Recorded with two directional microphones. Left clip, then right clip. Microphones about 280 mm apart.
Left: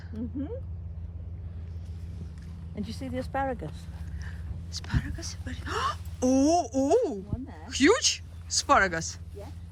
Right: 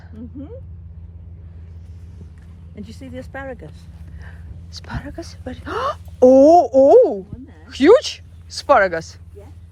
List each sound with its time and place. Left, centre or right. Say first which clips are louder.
2.7 s speech: right 1 dB; left
4.2 s speech: right 4 dB; centre